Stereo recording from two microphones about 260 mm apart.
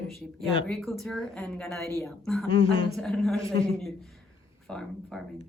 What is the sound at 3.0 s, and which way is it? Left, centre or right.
Speech, centre.